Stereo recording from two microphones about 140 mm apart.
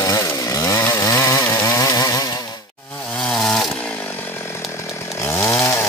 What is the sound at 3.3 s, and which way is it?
Chainsaw, 5° left (ahead or behind).